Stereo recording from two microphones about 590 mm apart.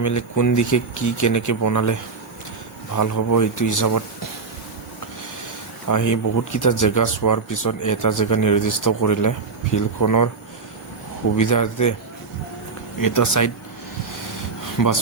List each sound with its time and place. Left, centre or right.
0.0 s speech: left
5.9 s speech: left
11.3 s speech: left
13.0 s speech: left
14.8 s speech: left